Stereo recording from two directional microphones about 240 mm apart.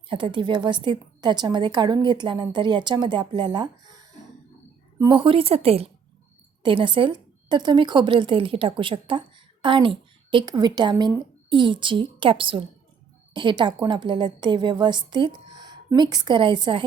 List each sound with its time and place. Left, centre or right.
0.1 s a woman's voice: centre